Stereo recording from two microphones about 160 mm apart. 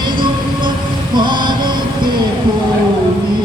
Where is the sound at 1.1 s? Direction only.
30° right (ahead or behind).